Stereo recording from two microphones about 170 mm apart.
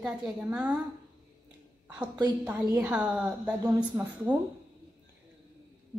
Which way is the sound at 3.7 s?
20° right (ahead or behind).